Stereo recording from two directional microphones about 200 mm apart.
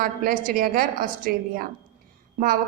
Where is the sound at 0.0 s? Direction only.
45° right (ahead or behind).